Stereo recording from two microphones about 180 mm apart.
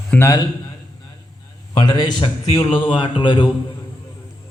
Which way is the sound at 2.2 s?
30° left (ahead or behind).